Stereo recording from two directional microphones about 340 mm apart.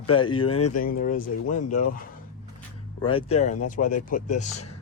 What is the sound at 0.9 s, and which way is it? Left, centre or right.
Speech, left.